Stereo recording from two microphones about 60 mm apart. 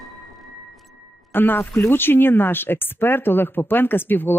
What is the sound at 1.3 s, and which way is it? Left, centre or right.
Speech, left.